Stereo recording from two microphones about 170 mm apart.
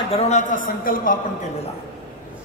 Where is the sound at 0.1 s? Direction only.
40° left (ahead or behind).